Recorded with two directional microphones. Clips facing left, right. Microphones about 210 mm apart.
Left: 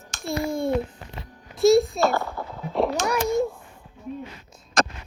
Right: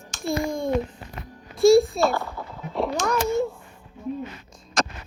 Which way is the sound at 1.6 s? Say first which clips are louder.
Right 2 dB; centre (ahead or behind).